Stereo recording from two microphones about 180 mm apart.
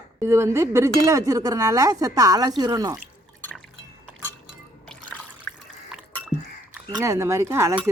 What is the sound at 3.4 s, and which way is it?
Liquid, 5° left (ahead or behind).